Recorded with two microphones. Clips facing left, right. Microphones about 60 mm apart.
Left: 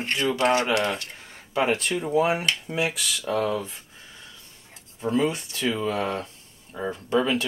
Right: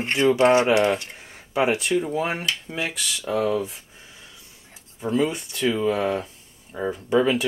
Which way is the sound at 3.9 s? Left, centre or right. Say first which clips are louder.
Even; centre.